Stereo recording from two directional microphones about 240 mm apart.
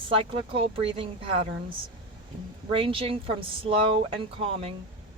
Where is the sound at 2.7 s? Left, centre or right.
Right.